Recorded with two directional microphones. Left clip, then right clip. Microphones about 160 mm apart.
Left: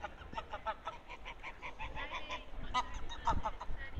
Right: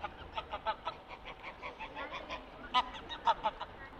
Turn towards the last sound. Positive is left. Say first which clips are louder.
# right 5 dB
turn(degrees=-45)  # may be behind; listen again after turning